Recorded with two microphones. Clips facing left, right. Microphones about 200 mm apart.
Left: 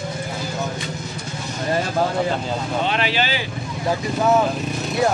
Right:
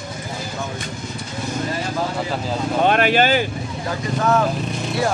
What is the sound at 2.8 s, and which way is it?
Vehicle, 50° right (ahead or behind).